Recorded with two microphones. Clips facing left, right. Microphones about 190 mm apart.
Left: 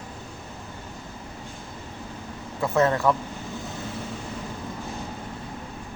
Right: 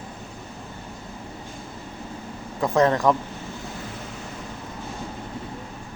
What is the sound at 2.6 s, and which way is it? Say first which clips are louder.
Speech: right 2 dB; 15° right (ahead or behind).